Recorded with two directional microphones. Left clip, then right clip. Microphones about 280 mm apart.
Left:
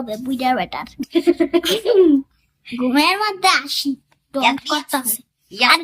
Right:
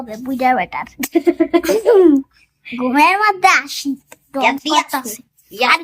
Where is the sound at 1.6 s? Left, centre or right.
Centre.